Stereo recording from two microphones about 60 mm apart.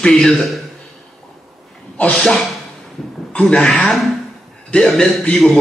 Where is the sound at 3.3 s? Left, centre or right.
Centre.